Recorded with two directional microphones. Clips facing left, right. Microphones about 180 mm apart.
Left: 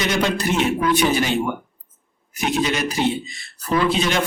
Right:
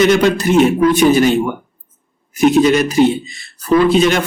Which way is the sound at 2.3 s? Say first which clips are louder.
Right 11 dB; 50° right (ahead or behind).